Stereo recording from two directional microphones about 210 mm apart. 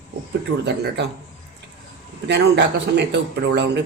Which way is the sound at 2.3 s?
55° right (ahead or behind).